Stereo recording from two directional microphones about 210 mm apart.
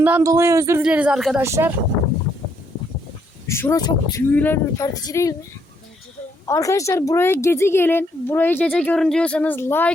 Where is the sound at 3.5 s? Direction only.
15° left (ahead or behind).